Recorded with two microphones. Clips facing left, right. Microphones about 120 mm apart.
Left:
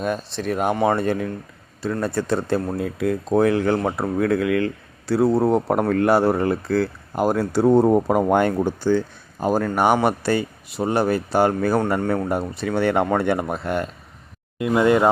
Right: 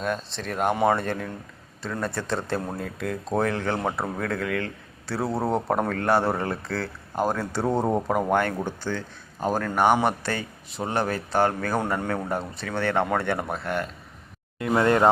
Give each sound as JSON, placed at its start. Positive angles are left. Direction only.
{"t": 0.0, "sound": "speech", "side_deg": 10}